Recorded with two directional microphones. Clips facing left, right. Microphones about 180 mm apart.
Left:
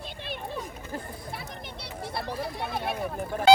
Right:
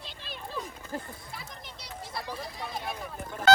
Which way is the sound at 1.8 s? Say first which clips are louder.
Left 4 dB; 60° left (ahead or behind).